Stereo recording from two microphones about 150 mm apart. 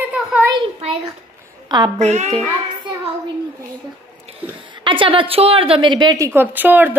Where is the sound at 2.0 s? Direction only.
50° right (ahead or behind).